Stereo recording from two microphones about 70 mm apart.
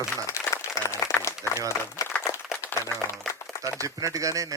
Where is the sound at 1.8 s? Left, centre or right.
Left.